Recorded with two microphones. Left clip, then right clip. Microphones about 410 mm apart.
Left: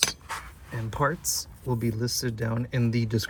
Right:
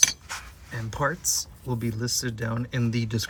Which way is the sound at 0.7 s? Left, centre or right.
Centre.